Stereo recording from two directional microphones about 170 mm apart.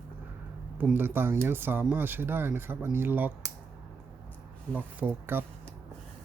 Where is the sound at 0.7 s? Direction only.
10° right (ahead or behind).